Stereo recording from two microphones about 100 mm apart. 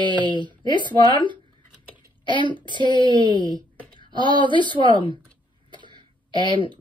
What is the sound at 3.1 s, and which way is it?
Speech, 50° right (ahead or behind).